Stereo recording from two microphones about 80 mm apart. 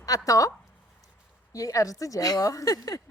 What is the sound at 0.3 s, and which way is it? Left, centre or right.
Speech, left.